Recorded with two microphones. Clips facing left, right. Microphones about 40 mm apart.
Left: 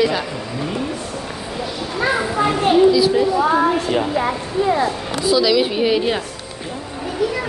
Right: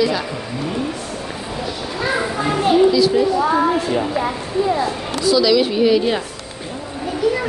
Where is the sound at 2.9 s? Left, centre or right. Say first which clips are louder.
Even; centre.